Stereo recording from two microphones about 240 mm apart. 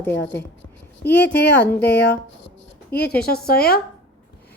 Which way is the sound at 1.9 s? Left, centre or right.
Left.